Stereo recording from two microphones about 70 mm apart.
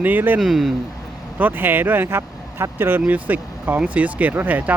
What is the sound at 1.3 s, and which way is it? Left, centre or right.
Speech, right.